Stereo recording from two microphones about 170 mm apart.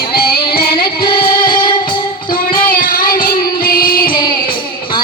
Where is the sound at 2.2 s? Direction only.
55° left (ahead or behind).